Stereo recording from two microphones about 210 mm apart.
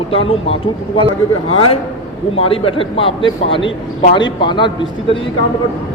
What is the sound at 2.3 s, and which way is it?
A man's voice, 25° left (ahead or behind).